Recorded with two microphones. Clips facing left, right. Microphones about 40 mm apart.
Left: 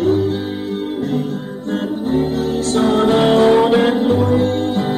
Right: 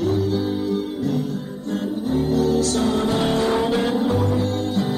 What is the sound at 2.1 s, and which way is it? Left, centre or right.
Music, left.